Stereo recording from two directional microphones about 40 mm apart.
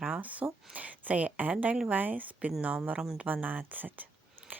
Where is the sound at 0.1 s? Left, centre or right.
Right.